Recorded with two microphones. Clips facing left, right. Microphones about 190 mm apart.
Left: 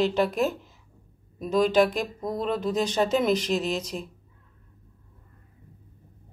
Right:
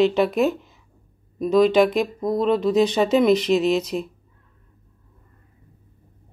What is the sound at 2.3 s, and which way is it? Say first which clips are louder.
Speech: right 8 dB; 75° right (ahead or behind).